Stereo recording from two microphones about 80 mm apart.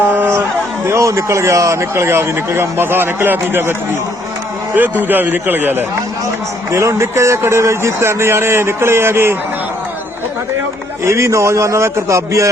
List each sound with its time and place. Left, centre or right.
0.0 s a sound: right
0.9 s a man's voice: right
6.7 s a man's voice: right
11.0 s a man's voice: right